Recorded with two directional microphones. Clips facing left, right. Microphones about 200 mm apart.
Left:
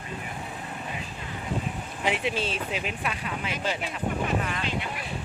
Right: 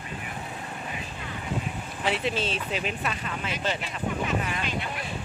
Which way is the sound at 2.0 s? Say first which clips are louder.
Even; 15° left (ahead or behind).